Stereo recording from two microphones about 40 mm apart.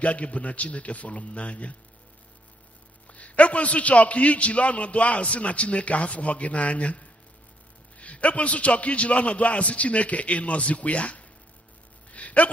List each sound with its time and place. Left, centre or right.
0.0 s a man's voice: left
3.1 s a man's voice: left
12.1 s a sound: left